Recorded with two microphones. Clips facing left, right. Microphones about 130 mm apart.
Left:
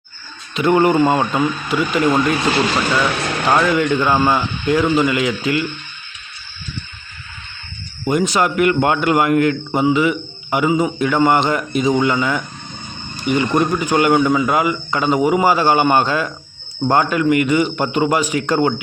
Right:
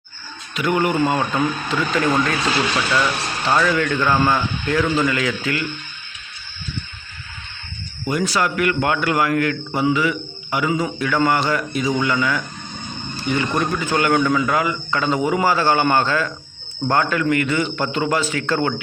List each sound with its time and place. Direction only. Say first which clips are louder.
0.5 s speech: left 6 dB; 30° left (ahead or behind)
1.4 s a man's voice: left 3 dB; 10° left (ahead or behind)
3.2 s speech: left 5 dB; 60° left (ahead or behind)
3.5 s a man's voice: left 3 dB; 15° left (ahead or behind)
8.0 s a man's voice: left 4 dB; 20° left (ahead or behind)